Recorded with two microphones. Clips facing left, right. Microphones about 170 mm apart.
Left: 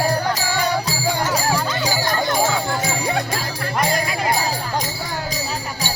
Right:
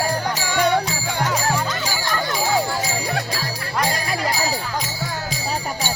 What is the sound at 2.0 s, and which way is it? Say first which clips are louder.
Jingle bell: left 3 dB; 50° left (ahead or behind).